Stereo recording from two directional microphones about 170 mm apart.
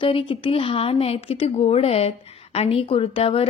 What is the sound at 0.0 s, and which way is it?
A woman's voice, 30° left (ahead or behind).